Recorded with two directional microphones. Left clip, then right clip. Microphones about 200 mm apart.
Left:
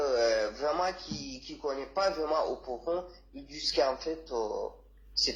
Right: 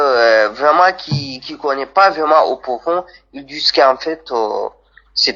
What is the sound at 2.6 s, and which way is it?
Speech, 40° right (ahead or behind).